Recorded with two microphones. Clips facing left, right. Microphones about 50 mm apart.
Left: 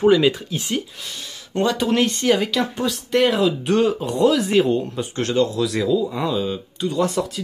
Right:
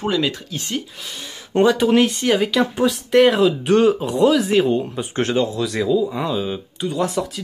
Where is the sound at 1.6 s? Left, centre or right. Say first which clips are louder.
Right 4 dB; centre.